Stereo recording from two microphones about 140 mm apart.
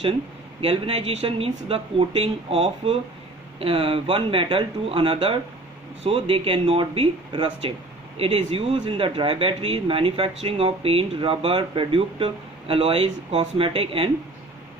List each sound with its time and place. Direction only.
0.6 s speech: 45° right (ahead or behind)